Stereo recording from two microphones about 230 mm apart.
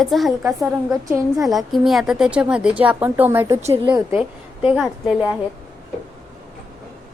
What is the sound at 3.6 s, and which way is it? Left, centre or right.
Speech, right.